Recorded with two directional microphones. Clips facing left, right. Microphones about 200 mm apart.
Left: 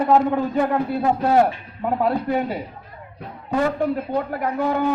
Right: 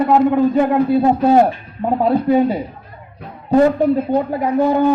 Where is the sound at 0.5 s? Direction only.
20° right (ahead or behind).